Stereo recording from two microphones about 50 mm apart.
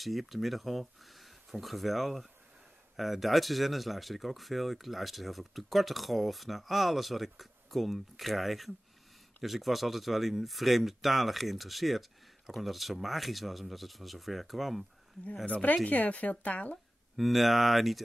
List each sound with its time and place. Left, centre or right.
0.0 s speech: centre
15.4 s speech: left
17.2 s speech: centre